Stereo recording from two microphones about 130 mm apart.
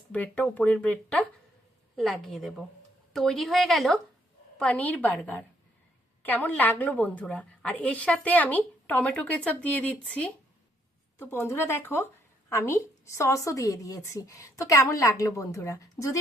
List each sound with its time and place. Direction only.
0.1 s a woman's voice: 10° left (ahead or behind)